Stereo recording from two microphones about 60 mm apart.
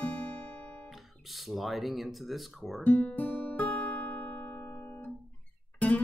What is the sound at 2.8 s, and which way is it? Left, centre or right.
Guitar, left.